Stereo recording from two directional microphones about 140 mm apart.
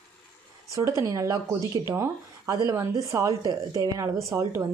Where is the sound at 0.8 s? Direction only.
20° right (ahead or behind).